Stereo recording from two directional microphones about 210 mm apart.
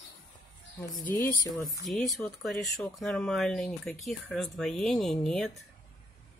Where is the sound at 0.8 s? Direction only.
20° left (ahead or behind); by 5.6 s centre (ahead or behind).